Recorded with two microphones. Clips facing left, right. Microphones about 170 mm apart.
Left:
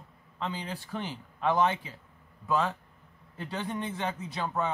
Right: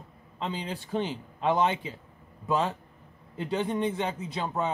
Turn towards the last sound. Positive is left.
turn(degrees=-20)  # may be behind; listen again after turning